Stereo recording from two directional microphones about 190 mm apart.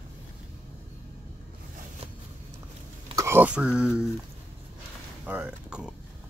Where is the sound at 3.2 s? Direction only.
10° right (ahead or behind).